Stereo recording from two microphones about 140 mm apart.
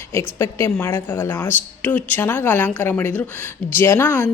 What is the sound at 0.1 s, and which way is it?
Speech, 20° left (ahead or behind).